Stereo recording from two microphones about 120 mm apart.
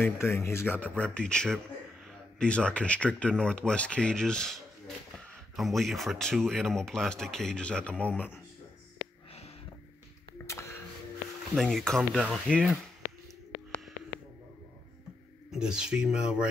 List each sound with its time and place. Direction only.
0.0 s speech: 20° left (ahead or behind)
10.4 s a sound: 25° left (ahead or behind)
11.5 s speech: 5° left (ahead or behind)
15.5 s speech: 5° right (ahead or behind)